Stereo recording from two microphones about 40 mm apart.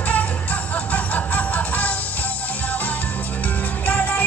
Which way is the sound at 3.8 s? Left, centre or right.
Left.